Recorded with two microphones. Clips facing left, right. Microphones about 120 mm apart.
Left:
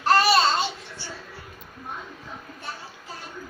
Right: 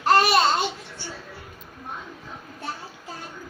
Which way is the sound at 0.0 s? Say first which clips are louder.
Right 1 dB; 15° right (ahead or behind).